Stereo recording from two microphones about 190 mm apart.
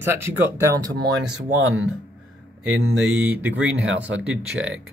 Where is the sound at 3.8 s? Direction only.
70° right (ahead or behind).